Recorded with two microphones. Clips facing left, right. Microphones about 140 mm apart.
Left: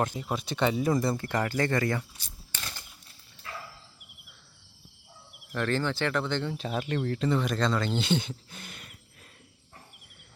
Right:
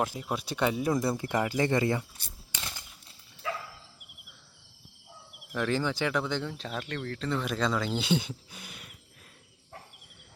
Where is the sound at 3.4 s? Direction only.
90° right.